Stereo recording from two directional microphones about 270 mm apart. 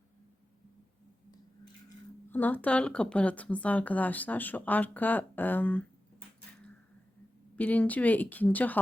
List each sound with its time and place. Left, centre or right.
2.3 s a woman's voice: centre
7.5 s a woman's voice: centre